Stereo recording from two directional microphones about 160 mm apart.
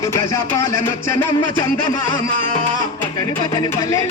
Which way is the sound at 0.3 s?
20° left (ahead or behind).